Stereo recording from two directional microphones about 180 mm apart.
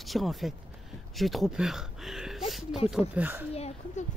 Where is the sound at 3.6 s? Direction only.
35° left (ahead or behind).